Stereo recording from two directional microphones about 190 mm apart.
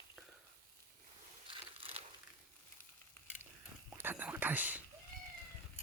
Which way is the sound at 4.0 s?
10° right (ahead or behind).